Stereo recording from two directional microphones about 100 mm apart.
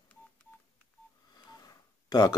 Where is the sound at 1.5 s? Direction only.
40° left (ahead or behind).